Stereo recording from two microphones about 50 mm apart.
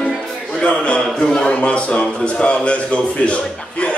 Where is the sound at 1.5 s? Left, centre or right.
Left.